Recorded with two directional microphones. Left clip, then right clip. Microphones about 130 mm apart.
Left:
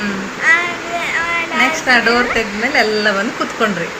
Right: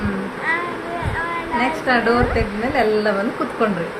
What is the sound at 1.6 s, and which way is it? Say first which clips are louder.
Speech: left 5 dB; centre (ahead or behind).